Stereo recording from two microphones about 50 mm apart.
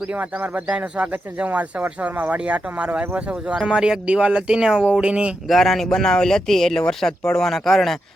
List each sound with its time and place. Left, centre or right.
0.1 s speech: right
3.7 s speech: centre
5.5 s speech: centre